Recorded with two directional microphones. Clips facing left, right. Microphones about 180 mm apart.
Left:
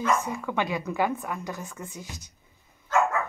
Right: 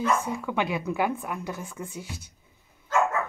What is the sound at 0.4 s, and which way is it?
A woman's voice, 10° right (ahead or behind).